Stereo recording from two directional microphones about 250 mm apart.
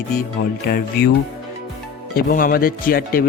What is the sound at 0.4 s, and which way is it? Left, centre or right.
Speech, left.